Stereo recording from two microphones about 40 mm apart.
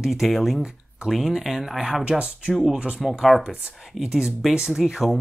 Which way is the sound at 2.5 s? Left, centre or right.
Centre.